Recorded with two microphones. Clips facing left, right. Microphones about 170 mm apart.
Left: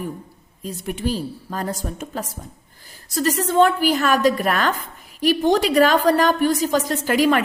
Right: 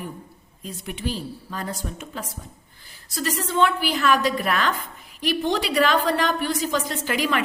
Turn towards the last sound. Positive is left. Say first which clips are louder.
# left 6 dB
turn(degrees=40)  # may be behind; listen again after turning